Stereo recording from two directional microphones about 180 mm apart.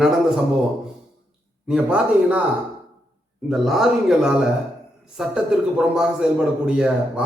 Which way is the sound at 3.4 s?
Centre (ahead or behind).